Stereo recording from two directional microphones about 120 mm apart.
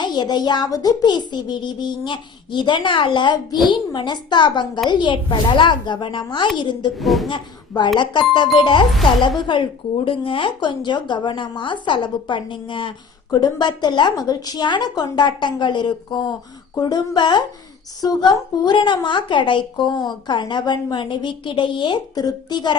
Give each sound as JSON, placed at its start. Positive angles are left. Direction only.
{"t": 0.0, "sound": "a child's voice", "side_deg": 35}
{"t": 7.0, "sound": "speech", "side_deg": 0}
{"t": 7.9, "sound": "a child's voice", "side_deg": 40}